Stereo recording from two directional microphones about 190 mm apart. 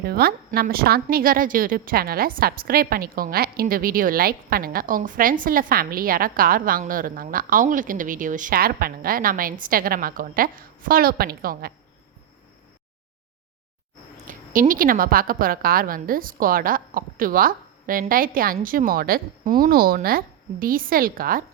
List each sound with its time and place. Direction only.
0.0 s a woman's voice: 55° right (ahead or behind)
14.3 s a woman's voice: 45° right (ahead or behind)